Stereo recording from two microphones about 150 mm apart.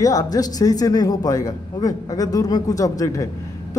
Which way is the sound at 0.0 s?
25° left (ahead or behind).